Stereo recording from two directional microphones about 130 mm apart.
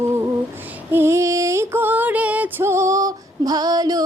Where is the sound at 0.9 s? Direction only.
20° right (ahead or behind).